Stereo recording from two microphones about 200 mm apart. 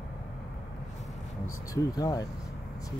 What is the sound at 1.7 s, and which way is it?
Speech, 20° left (ahead or behind).